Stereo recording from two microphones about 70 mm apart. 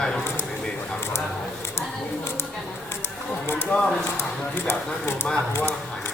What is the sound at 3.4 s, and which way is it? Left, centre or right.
Speech, left.